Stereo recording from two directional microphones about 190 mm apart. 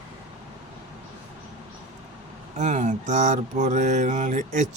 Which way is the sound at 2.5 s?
40° right (ahead or behind).